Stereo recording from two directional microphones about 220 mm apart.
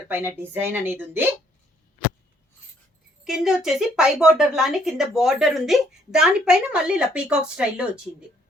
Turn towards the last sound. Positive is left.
turn(degrees=-5)  # may be behind; listen again after turning